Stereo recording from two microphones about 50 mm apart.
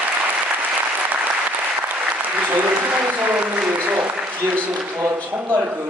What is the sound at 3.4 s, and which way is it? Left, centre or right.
Applause, right.